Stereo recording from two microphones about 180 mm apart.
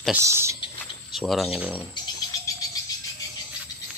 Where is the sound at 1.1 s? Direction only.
Centre (ahead or behind).